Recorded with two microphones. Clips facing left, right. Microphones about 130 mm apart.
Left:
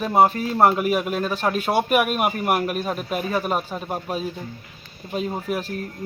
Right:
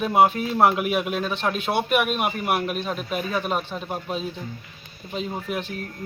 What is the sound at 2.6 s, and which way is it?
A man's voice, 10° left (ahead or behind).